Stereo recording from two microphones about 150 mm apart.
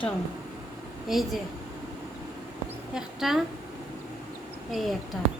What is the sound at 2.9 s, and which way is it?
Speech, centre (ahead or behind).